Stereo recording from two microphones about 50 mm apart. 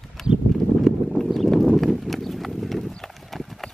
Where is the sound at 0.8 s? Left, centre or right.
Centre.